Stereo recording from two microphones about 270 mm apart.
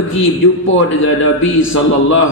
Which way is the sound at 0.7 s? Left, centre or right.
Left.